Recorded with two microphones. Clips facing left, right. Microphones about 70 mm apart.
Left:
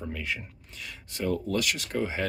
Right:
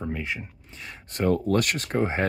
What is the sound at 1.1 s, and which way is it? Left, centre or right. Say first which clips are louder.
Speech: right 6 dB; right.